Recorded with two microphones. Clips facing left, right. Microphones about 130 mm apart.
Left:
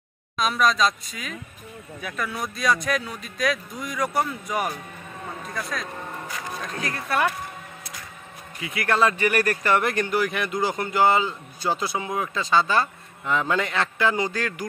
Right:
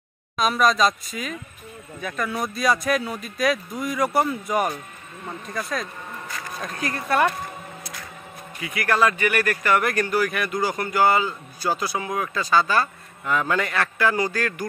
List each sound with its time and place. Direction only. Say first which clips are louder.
0.4 s a man's voice: right 2 dB; centre (ahead or behind)
8.5 s speech: right 1 dB; 25° left (ahead or behind)